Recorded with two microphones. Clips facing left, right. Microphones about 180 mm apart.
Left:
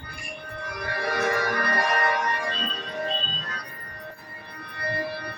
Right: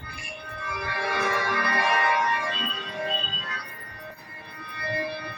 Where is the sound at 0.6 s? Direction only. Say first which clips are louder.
Left 1 dB; 45° left (ahead or behind).